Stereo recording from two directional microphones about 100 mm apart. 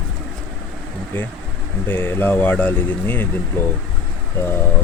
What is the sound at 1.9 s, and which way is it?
Speech, 20° left (ahead or behind).